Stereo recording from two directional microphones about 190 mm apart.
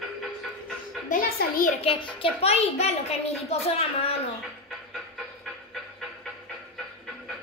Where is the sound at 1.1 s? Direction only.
50° left (ahead or behind).